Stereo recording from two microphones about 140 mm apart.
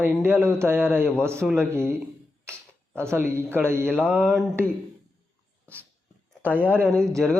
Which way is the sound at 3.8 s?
5° left (ahead or behind).